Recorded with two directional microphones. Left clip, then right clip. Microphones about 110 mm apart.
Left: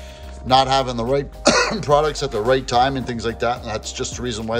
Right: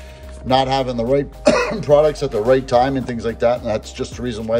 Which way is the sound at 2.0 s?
40° left (ahead or behind).